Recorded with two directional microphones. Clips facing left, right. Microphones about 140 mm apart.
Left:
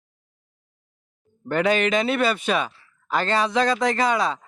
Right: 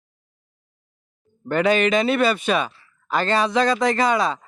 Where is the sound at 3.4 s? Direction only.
80° right.